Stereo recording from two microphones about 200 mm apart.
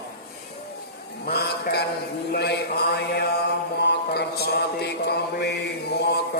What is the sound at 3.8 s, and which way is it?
Mantra, 55° left (ahead or behind).